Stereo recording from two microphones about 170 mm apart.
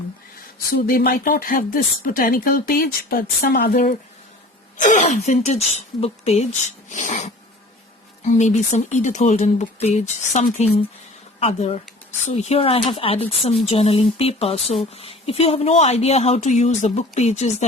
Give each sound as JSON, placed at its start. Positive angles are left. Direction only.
{"t": 0.9, "sound": "speech", "side_deg": 60}
{"t": 4.8, "sound": "a woman's voice", "side_deg": 45}